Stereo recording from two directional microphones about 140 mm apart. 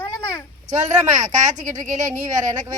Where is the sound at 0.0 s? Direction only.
20° left (ahead or behind).